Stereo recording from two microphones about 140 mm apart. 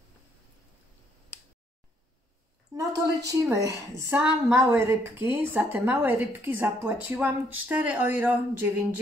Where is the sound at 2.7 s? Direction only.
25° right (ahead or behind).